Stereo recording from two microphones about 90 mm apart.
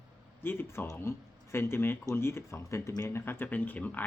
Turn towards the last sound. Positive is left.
turn(degrees=20)  # may be behind; listen again after turning